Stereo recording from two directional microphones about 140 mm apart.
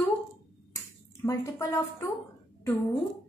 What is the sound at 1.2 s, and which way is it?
Speech, 20° left (ahead or behind).